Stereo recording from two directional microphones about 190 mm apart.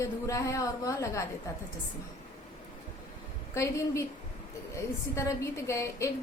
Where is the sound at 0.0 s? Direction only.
15° left (ahead or behind).